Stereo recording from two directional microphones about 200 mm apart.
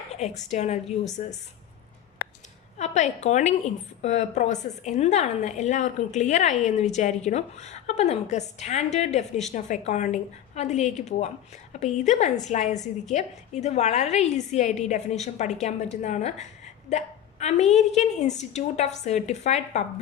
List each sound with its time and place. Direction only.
0.1 s a woman's voice: 35° left (ahead or behind)
2.7 s a woman's voice: 35° left (ahead or behind)